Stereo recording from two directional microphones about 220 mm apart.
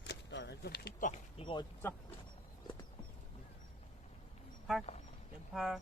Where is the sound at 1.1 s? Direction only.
25° left (ahead or behind).